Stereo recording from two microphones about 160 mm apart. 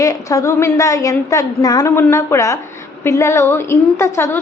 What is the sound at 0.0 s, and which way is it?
A woman's voice, 20° left (ahead or behind).